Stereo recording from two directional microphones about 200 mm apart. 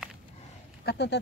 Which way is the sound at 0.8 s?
60° left (ahead or behind).